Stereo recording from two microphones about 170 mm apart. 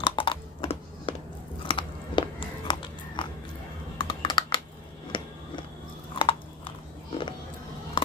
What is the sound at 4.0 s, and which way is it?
Computer keyboard, 30° left (ahead or behind).